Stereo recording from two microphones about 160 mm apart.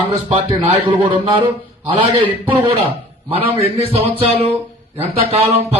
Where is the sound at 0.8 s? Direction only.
30° right (ahead or behind).